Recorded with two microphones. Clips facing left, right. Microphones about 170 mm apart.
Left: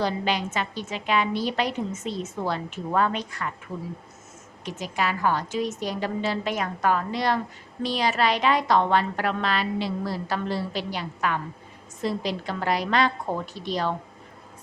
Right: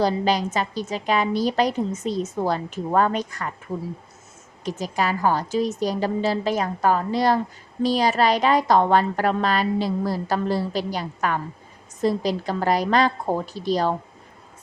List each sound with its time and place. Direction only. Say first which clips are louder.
0.0 s a woman's voice: right 5 dB; 40° right (ahead or behind)
4.6 s a woman's voice: right 3 dB; 40° right (ahead or behind)